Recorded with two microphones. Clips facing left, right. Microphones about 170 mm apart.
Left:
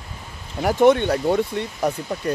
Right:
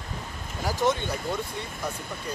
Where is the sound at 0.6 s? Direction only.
60° left (ahead or behind).